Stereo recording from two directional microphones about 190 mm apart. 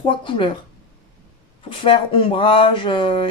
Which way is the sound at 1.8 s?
30° left (ahead or behind).